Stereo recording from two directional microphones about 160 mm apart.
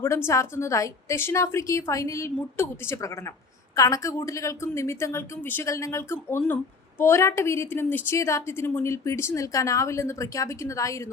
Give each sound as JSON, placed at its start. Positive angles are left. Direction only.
{"t": 0.0, "sound": "a woman's voice", "side_deg": 15}